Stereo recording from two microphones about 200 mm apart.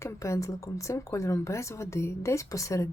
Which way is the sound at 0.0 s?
15° left (ahead or behind).